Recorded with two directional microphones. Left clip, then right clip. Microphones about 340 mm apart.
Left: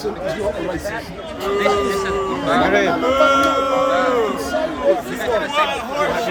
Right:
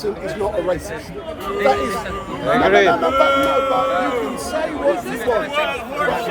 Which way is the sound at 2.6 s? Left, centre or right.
Right.